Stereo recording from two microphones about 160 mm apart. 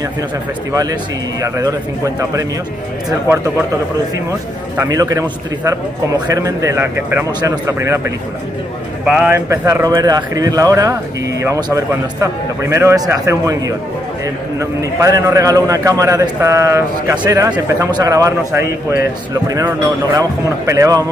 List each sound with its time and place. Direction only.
1.4 s speech: 20° right (ahead or behind)
4.8 s speech: 20° right (ahead or behind)
5.2 s speech: 10° right (ahead or behind)
6.1 s speech: 25° right (ahead or behind)
14.6 s speech: 20° right (ahead or behind)
20.2 s speech: 20° right (ahead or behind)